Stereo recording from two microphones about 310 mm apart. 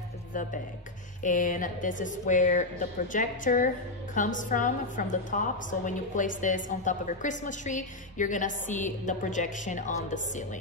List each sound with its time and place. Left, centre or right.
0.3 s a woman's voice: left